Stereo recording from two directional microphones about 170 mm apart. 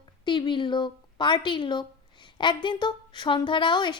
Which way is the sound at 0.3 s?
25° left (ahead or behind).